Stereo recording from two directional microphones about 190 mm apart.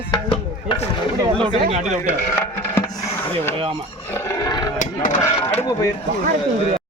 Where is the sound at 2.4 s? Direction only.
15° left (ahead or behind).